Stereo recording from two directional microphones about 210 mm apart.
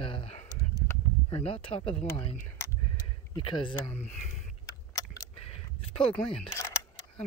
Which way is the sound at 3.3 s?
20° left (ahead or behind).